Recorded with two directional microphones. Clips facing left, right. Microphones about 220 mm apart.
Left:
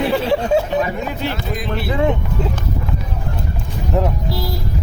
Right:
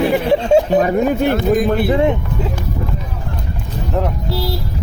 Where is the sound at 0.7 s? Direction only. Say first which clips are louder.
Right 7 dB; 50° right (ahead or behind).